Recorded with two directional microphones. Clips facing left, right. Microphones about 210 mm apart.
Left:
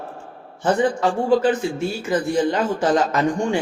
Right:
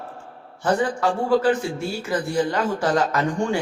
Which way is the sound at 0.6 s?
20° left (ahead or behind).